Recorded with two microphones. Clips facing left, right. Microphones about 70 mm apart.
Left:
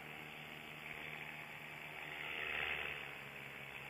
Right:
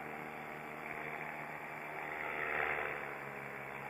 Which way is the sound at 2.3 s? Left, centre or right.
Right.